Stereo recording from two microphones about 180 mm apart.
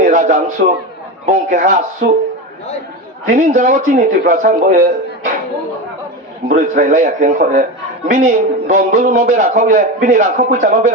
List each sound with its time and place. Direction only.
0.0 s a sound: 45° right (ahead or behind)
1.3 s a man's voice: 45° right (ahead or behind)
3.2 s a man's voice: 40° right (ahead or behind)
6.5 s a man's voice: 45° right (ahead or behind)